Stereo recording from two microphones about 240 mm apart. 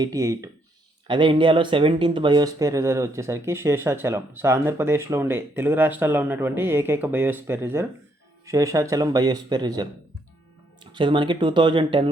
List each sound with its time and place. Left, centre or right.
0.0 s speech: centre
10.9 s speech: centre